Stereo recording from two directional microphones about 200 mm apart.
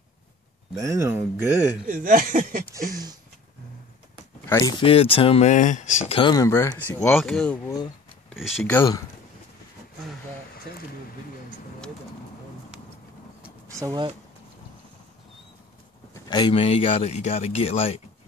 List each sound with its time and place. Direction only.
0.7 s speech: 15° right (ahead or behind)
1.9 s speech: 40° right (ahead or behind)
4.5 s speech: 15° left (ahead or behind)
8.3 s speech: centre (ahead or behind)
8.7 s speech: 15° left (ahead or behind)
13.7 s speech: 15° right (ahead or behind)
16.1 s speech: 20° left (ahead or behind)